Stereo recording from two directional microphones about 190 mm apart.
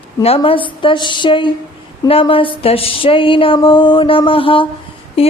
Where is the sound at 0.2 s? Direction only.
30° left (ahead or behind).